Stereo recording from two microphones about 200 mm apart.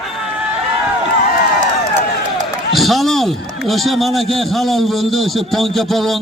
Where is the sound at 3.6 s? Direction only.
Centre (ahead or behind).